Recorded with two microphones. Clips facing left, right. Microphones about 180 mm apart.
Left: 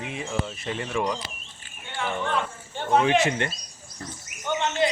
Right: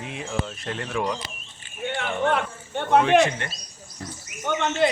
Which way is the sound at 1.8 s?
65° right (ahead or behind).